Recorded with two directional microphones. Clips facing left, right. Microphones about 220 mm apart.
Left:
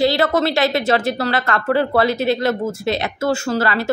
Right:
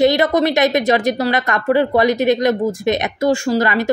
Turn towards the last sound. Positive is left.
turn(degrees=-15)  # may be behind; listen again after turning